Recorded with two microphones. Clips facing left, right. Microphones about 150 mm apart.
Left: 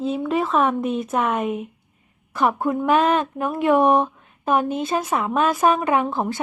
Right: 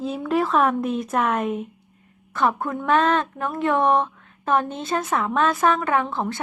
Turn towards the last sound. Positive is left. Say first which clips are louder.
# left 2 dB
turn(degrees=20)  # may be behind; listen again after turning